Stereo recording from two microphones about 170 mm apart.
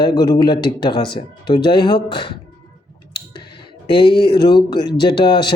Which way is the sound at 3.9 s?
30° left (ahead or behind).